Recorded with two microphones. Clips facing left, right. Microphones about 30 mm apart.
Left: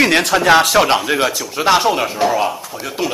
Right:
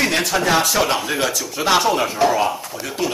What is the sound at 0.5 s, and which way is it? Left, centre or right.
Speech, left.